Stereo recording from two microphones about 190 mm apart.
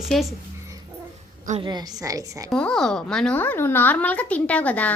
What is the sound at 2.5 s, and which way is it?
Speech, 5° left (ahead or behind).